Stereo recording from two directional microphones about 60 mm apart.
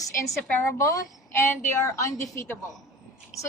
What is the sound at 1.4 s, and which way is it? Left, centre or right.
Speech, left.